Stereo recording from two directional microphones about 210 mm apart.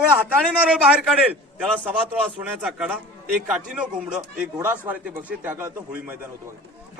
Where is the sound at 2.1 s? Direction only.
5° right (ahead or behind).